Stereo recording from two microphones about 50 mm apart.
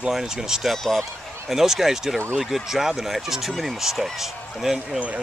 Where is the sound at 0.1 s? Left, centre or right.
Centre.